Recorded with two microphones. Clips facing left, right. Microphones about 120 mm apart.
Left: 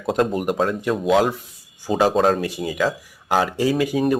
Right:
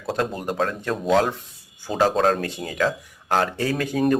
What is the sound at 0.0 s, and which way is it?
Speech, 20° left (ahead or behind).